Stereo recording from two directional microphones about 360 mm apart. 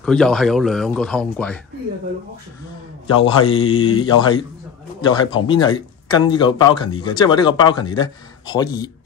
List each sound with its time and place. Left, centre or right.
0.0 s speech: centre
3.2 s speech: centre
3.4 s mantra: left
3.9 s speech: centre